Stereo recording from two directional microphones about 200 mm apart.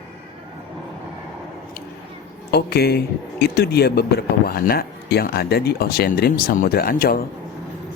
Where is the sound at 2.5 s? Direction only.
50° left (ahead or behind).